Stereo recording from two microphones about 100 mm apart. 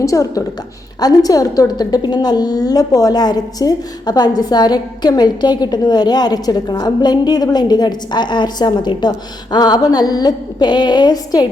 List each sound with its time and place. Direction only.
0.0 s a woman's voice: 35° left (ahead or behind)